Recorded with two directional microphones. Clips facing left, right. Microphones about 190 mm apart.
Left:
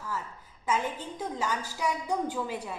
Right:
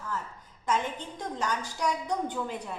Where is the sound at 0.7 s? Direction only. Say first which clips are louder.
Even; 5° left (ahead or behind).